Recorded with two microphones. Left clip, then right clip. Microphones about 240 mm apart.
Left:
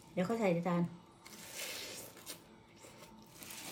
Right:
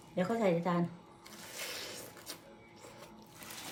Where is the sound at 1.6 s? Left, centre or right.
Centre.